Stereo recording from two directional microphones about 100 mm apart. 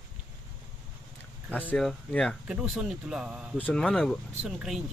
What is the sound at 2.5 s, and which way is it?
Speech, 10° right (ahead or behind).